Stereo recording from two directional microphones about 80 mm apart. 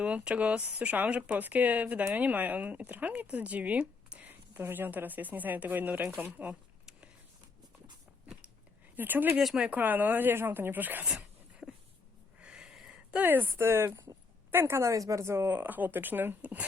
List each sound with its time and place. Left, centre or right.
0.0 s speech: centre
6.1 s a sound: right
9.0 s speech: right
9.4 s speech: centre
9.6 s speech: right
11.6 s a sound: right
12.4 s a sound: centre
13.2 s speech: right
15.5 s speech: right